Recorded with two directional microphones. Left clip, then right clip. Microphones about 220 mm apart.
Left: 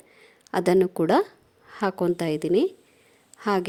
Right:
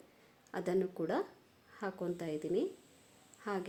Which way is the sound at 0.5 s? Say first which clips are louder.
Left 15 dB; 45° left (ahead or behind).